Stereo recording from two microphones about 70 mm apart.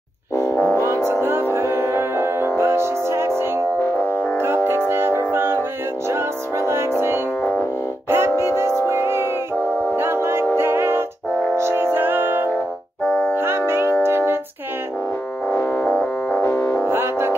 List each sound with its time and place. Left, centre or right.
1.0 s music: right
4.6 s music: right
13.0 s music: centre
13.3 s music: right
15.4 s music: left
16.8 s music: right